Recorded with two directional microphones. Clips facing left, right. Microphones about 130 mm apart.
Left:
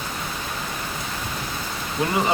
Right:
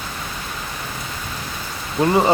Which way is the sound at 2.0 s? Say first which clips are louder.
Right 7 dB; 30° right (ahead or behind).